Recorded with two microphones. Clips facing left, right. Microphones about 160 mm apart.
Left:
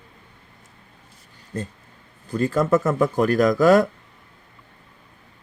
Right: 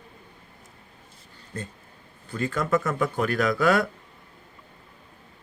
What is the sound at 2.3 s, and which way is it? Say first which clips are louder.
Speech: left 6 dB; 40° left (ahead or behind).